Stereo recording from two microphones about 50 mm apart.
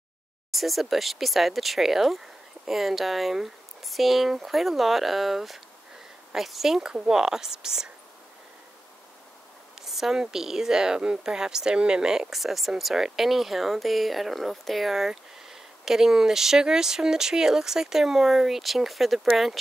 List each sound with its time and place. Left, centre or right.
0.5 s speech: centre
9.8 s speech: centre